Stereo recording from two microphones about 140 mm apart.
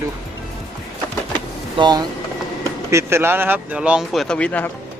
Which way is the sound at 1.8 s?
30° right (ahead or behind).